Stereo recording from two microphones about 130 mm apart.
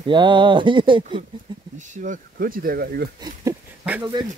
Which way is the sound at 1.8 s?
80° right.